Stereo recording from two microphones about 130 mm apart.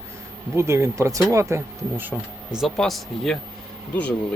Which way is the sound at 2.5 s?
Centre (ahead or behind).